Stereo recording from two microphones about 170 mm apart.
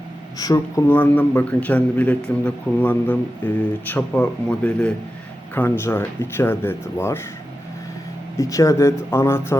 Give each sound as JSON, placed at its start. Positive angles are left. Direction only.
{"t": 0.3, "sound": "a man's voice", "side_deg": 20}
{"t": 8.4, "sound": "a man's voice", "side_deg": 20}